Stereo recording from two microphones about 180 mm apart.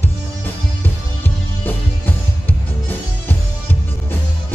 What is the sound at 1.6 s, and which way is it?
Music, 10° left (ahead or behind).